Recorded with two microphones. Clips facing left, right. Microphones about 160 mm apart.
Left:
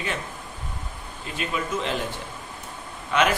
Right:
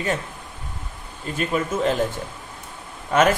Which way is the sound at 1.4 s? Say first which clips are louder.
Right 5 dB; 45° right (ahead or behind).